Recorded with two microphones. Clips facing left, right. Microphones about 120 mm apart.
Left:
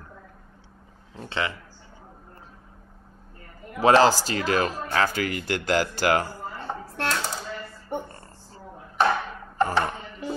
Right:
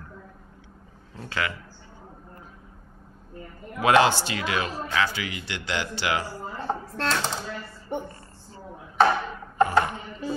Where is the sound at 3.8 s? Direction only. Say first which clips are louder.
Left 2 dB; 35° left (ahead or behind).